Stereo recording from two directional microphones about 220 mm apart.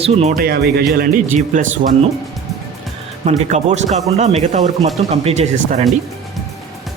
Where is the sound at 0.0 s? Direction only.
30° right (ahead or behind).